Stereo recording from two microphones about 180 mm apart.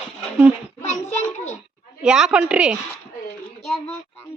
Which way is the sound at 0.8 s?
40° left (ahead or behind).